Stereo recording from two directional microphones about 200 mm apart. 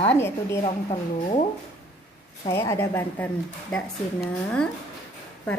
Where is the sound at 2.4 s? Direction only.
15° left (ahead or behind).